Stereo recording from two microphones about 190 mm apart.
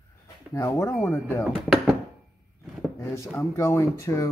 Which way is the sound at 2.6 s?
Centre (ahead or behind).